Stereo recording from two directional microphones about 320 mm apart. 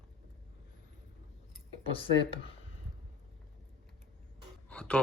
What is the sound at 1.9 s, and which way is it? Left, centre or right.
Speech, centre.